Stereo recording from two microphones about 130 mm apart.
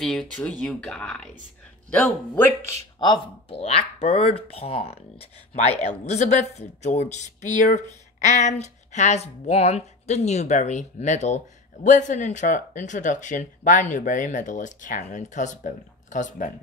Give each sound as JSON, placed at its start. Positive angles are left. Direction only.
{"t": 0.0, "sound": "speech", "side_deg": 5}
{"t": 3.0, "sound": "speech", "side_deg": 35}
{"t": 3.5, "sound": "speech", "side_deg": 50}
{"t": 5.7, "sound": "a man's voice", "side_deg": 60}